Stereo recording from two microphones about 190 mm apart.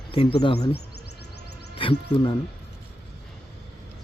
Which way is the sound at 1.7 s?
25° left (ahead or behind).